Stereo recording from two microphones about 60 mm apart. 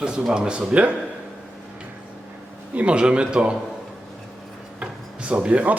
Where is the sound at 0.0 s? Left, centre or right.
Centre.